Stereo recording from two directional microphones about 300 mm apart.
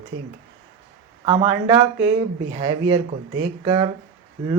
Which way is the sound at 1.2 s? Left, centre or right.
Centre.